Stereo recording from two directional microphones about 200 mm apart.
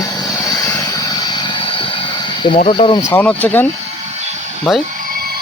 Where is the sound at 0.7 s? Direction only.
20° left (ahead or behind).